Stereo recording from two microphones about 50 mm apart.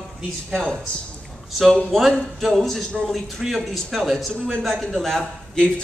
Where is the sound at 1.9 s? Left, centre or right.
Centre.